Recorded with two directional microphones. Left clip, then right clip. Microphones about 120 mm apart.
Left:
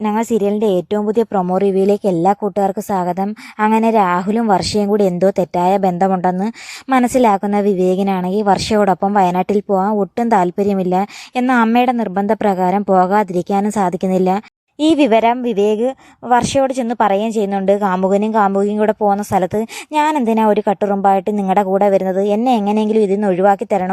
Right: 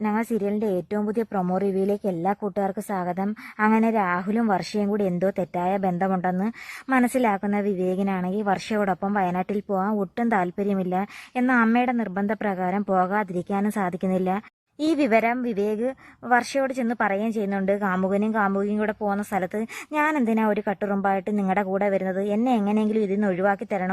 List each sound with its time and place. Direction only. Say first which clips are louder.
0.0 s a woman's voice: left 9 dB; 35° left (ahead or behind)
9.6 s a woman's voice: left 10 dB; 30° left (ahead or behind)